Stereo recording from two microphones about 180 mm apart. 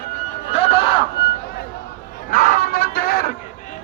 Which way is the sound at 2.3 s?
50° left (ahead or behind).